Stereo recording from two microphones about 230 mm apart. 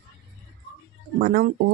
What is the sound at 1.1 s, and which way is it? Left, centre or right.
Speech, right.